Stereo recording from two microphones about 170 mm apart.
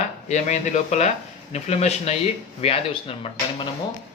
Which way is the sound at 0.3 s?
45° left (ahead or behind).